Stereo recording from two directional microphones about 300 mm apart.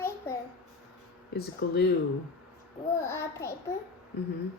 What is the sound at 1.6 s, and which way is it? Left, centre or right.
Speech, left.